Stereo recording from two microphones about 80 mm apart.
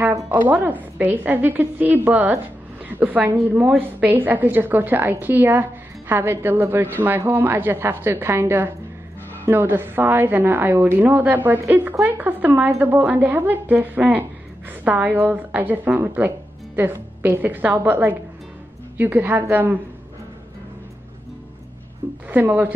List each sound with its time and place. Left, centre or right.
0.3 s a woman's voice: right
22.3 s a woman's voice: right